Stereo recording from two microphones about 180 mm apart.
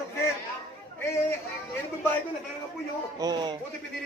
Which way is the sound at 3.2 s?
25° right (ahead or behind).